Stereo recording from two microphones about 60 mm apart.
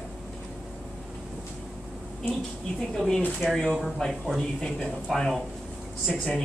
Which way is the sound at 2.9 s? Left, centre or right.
Centre.